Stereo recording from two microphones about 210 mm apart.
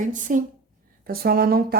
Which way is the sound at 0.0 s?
40° right (ahead or behind).